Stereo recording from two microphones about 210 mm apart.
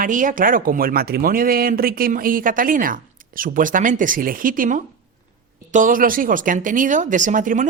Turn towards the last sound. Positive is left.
turn(degrees=-40)  # may be behind; listen again after turning